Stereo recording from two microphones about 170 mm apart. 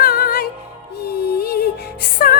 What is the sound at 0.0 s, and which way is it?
Music, 65° left (ahead or behind).